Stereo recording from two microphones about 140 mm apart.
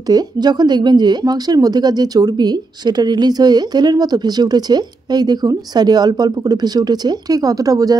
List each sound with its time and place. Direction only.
0.1 s speech: 30° right (ahead or behind)